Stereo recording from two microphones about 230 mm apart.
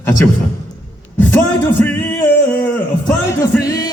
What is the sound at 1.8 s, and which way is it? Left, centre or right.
Music, centre.